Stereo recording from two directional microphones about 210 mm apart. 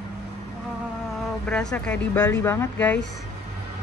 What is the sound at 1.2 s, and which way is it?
Speech, 5° left (ahead or behind).